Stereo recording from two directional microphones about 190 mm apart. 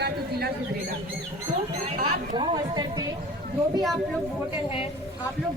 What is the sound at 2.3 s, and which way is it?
Speech, 25° right (ahead or behind).